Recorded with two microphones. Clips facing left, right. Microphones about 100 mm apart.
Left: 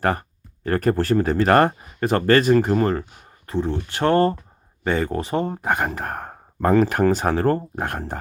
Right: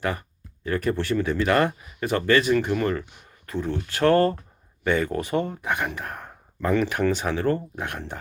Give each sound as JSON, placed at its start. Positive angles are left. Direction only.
{"t": 0.0, "sound": "speech", "side_deg": 45}